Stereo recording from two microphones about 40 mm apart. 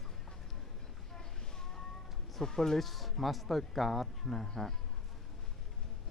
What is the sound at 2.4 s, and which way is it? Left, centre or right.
Speech, centre.